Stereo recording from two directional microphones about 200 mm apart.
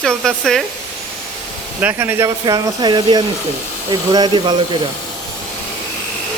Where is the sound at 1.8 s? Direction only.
10° right (ahead or behind).